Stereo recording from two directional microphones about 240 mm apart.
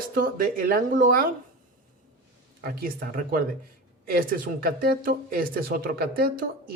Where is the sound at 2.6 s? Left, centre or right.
Right.